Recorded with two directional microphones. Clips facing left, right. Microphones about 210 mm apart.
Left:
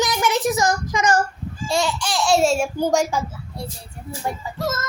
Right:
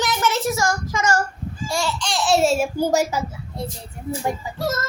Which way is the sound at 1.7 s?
20° left (ahead or behind).